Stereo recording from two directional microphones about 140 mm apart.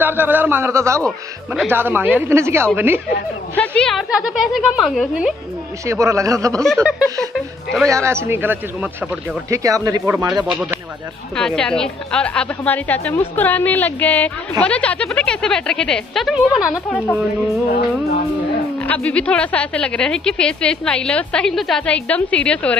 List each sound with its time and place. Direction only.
0.0 s a man's voice: 15° right (ahead or behind)
3.5 s speech: 10° left (ahead or behind)
5.9 s a man's voice: 20° right (ahead or behind)
6.6 s speech: centre (ahead or behind)
7.9 s a man's voice: 20° right (ahead or behind)
9.5 s a man's voice: 25° right (ahead or behind)
11.3 s a woman's voice: 5° left (ahead or behind)
18.8 s a woman's voice: 10° left (ahead or behind)